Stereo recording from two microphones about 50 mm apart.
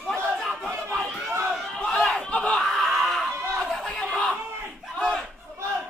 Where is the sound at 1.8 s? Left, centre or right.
Centre.